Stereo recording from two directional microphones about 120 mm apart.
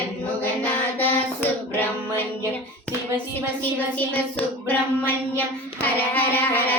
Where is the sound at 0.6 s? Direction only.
15° left (ahead or behind).